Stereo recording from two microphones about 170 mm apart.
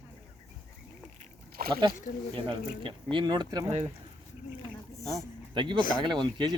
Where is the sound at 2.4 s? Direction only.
30° right (ahead or behind).